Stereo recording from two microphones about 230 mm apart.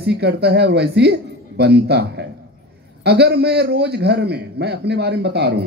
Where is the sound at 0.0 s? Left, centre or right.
Right.